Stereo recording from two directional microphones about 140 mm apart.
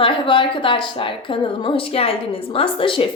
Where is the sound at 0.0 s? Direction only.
35° left (ahead or behind).